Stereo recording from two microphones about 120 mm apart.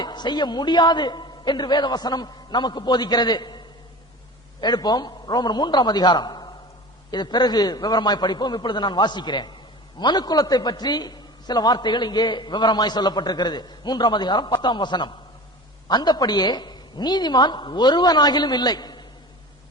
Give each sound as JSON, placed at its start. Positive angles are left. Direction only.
{"t": 0.0, "sound": "a man's voice", "side_deg": 35}
{"t": 4.6, "sound": "a man's voice", "side_deg": 35}